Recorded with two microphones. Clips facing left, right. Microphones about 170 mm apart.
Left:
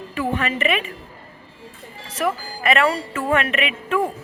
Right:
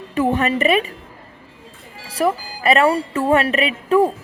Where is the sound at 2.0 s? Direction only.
35° right (ahead or behind).